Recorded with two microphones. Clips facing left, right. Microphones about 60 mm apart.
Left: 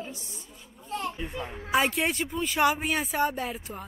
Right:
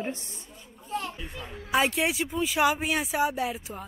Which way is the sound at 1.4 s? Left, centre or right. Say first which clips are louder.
Left 4 dB; centre.